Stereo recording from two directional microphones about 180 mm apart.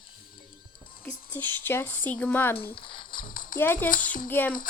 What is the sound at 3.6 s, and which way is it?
Speech, 10° left (ahead or behind).